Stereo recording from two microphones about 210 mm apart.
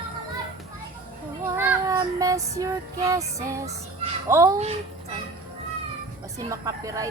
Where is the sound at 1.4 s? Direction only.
15° right (ahead or behind).